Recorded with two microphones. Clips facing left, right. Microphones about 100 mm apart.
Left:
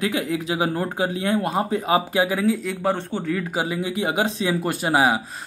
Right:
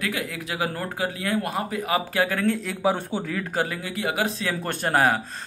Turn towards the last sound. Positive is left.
turn(degrees=10)  # may be behind; listen again after turning